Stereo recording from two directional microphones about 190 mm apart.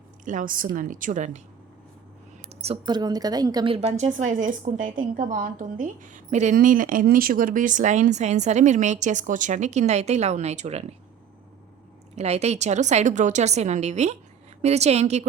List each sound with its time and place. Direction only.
0.3 s a woman's voice: 45° right (ahead or behind)
2.4 s speech: 35° right (ahead or behind)
3.8 s a woman's voice: 35° right (ahead or behind)
12.1 s a woman's voice: 35° right (ahead or behind)